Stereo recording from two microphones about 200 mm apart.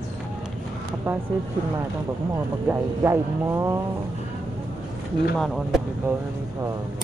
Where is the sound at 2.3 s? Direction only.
10° right (ahead or behind).